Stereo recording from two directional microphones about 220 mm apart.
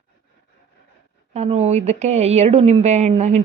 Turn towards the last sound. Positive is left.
turn(degrees=-30)  # may be behind; listen again after turning